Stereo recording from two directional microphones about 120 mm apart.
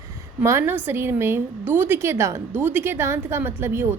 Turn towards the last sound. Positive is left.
turn(degrees=-20)  # may be behind; listen again after turning